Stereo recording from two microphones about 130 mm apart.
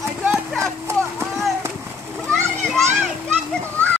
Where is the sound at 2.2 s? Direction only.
5° left (ahead or behind).